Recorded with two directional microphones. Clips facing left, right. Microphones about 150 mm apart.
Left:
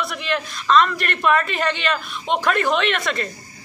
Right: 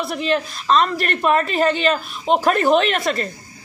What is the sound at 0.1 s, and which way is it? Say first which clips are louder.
Speech: right 5 dB; 35° right (ahead or behind).